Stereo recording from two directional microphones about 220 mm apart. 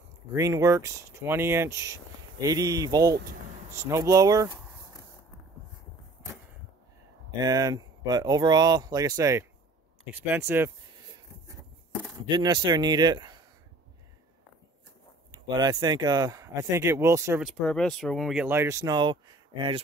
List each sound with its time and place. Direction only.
0.3 s speech: 15° right (ahead or behind)
7.2 s speech: 15° right (ahead or behind)
12.3 s a man's voice: 20° right (ahead or behind)
15.3 s speech: 20° right (ahead or behind)
17.4 s speech: centre (ahead or behind); by 19.8 s 20° right (ahead or behind)